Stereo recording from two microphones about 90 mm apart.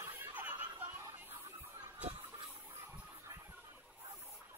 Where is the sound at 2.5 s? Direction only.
20° right (ahead or behind).